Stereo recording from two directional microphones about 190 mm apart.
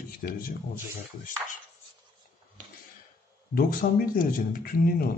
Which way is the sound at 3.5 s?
50° left (ahead or behind).